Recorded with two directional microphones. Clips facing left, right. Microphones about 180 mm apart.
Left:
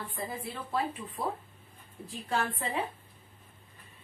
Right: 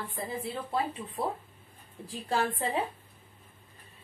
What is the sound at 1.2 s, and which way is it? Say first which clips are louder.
A woman's voice: right 2 dB; 25° right (ahead or behind).